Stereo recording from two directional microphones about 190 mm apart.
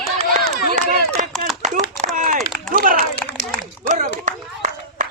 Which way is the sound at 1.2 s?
45° right (ahead or behind).